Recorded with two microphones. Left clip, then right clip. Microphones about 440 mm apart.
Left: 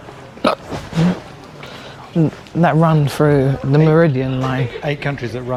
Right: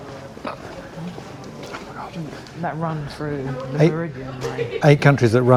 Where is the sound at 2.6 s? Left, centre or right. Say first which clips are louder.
Left 12 dB; left.